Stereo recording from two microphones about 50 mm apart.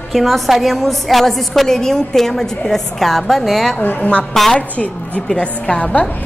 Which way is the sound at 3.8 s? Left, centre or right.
Left.